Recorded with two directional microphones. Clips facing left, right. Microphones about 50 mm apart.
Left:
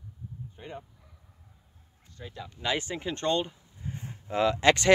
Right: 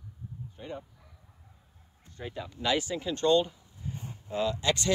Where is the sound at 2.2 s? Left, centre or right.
Right.